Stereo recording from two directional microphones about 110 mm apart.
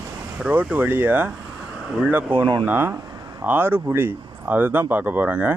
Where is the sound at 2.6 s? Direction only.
20° right (ahead or behind).